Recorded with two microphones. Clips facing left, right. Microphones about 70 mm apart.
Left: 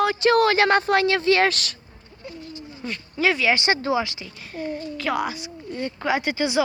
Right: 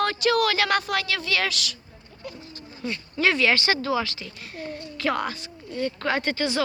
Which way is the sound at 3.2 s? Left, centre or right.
Centre.